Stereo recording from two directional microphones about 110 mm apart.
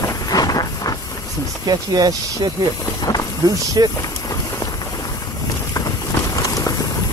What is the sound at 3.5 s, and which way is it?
Speech, 35° right (ahead or behind).